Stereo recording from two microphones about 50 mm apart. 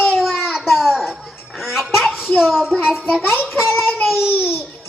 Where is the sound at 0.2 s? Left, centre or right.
Centre.